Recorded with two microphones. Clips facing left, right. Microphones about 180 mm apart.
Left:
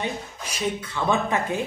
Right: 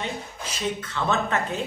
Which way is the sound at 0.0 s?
10° left (ahead or behind).